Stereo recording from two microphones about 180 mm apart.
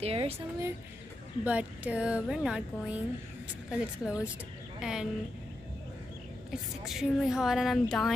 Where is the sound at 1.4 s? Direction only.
5° right (ahead or behind).